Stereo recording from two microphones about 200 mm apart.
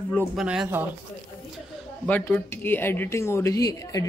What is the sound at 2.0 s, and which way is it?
A woman's voice, 10° left (ahead or behind).